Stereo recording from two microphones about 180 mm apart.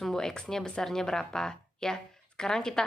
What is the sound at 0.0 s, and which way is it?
Speech, centre (ahead or behind).